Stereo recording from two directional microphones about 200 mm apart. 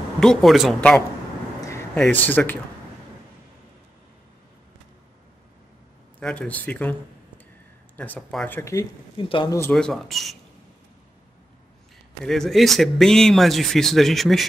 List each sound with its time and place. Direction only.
0.2 s speech: centre (ahead or behind)
6.1 s speech: 5° left (ahead or behind)
9.2 s speech: 25° left (ahead or behind)
9.6 s speech: 5° left (ahead or behind)
12.3 s speech: centre (ahead or behind)